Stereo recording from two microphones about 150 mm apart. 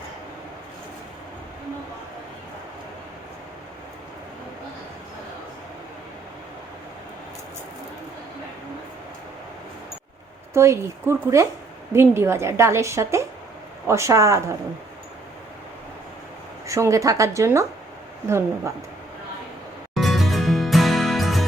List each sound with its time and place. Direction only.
10.5 s a woman's voice: 20° right (ahead or behind)
16.6 s a woman's voice: 20° right (ahead or behind)
19.9 s music: centre (ahead or behind)